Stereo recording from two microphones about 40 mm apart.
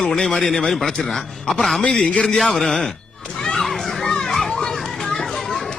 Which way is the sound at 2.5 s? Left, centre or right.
Centre.